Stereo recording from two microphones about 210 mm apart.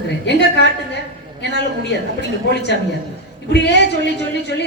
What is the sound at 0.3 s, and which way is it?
A woman's voice, 55° left (ahead or behind).